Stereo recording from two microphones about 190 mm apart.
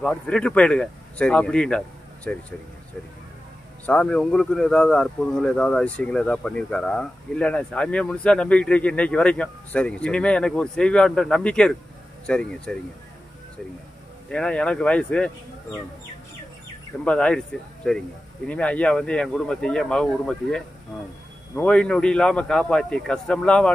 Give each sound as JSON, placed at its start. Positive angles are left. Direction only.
{"t": 0.0, "sound": "speech", "side_deg": 5}
{"t": 3.8, "sound": "speech", "side_deg": 5}
{"t": 14.3, "sound": "speech", "side_deg": 5}
{"t": 17.0, "sound": "speech", "side_deg": 5}